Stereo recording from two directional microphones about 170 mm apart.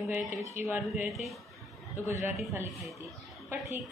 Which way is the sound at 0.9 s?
Centre (ahead or behind).